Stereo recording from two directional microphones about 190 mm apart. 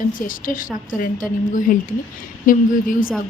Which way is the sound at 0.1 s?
45° left (ahead or behind).